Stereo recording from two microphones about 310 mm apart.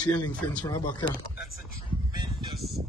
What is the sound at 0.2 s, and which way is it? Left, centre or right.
Speech, centre.